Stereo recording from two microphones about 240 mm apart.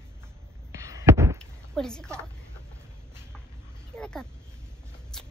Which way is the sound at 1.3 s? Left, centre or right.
Centre.